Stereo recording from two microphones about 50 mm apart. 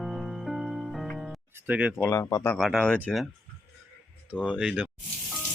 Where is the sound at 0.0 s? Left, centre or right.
Centre.